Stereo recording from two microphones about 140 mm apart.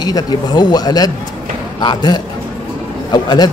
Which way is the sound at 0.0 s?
30° left (ahead or behind).